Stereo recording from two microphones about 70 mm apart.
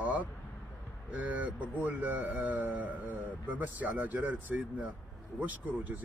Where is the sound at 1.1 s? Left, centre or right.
Right.